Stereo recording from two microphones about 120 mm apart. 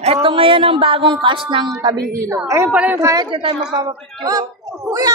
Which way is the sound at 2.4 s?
25° right (ahead or behind).